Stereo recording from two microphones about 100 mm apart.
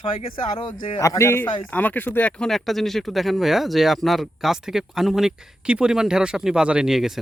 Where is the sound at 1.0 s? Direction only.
30° left (ahead or behind).